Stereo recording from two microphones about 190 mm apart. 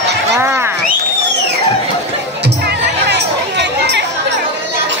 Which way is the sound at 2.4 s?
60° right (ahead or behind).